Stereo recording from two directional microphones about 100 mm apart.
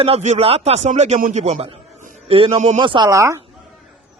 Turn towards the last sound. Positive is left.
turn(degrees=-30)  # may be behind; listen again after turning